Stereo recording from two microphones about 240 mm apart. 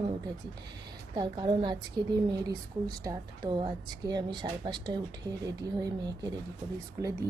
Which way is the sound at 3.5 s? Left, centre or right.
Centre.